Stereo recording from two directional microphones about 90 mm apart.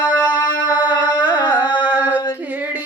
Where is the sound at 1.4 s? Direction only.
55° left (ahead or behind).